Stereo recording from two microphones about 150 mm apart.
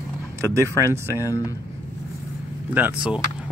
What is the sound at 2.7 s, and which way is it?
Speech, 10° right (ahead or behind).